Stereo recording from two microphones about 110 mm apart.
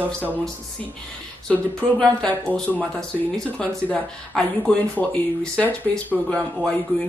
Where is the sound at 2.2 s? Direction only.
15° left (ahead or behind).